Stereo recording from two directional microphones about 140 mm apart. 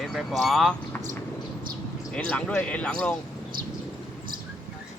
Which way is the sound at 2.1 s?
10° left (ahead or behind).